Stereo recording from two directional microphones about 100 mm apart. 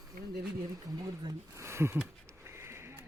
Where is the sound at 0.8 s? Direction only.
40° right (ahead or behind).